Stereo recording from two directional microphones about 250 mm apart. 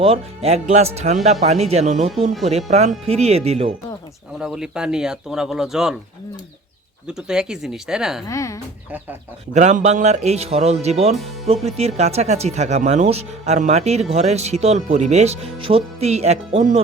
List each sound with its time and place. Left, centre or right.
0.0 s speech: right
4.4 s speech: centre
7.1 s speech: centre
8.3 s speech: centre
9.6 s speech: right